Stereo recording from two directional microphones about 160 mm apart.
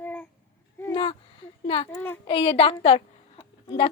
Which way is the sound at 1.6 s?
35° left (ahead or behind).